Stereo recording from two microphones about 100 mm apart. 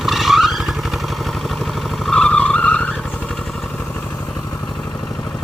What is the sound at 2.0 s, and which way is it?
Vehicle, 5° left (ahead or behind).